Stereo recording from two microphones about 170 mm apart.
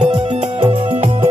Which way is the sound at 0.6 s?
35° right (ahead or behind).